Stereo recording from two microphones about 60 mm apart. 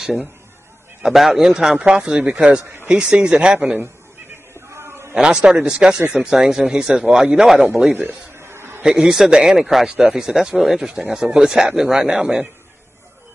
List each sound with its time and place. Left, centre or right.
1.0 s speech: centre
4.6 s a sound: right
5.1 s speech: centre
7.9 s a man's voice: right
8.4 s a sound: right
8.8 s speech: centre